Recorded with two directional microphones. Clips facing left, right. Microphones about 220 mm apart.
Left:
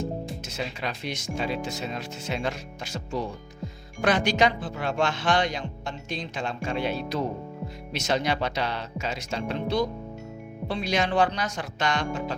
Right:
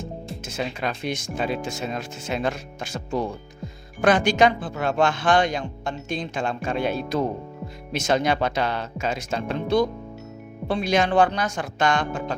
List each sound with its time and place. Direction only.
0.4 s speech: 50° right (ahead or behind)